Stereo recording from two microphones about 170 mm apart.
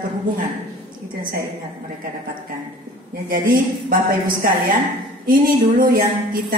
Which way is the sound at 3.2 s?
55° right (ahead or behind).